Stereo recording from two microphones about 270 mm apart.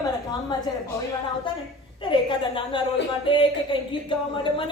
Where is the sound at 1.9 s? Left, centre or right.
Centre.